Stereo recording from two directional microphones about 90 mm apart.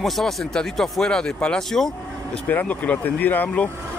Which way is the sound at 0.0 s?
Centre (ahead or behind).